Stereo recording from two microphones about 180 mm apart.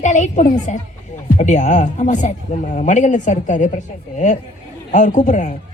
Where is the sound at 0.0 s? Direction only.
40° left (ahead or behind).